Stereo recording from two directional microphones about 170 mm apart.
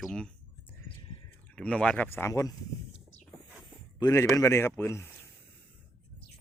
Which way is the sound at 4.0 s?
20° left (ahead or behind).